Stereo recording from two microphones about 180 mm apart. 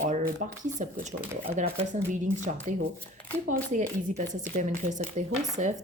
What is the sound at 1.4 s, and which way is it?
Speech, 35° right (ahead or behind).